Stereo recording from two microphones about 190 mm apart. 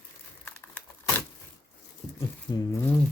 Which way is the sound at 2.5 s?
20° left (ahead or behind).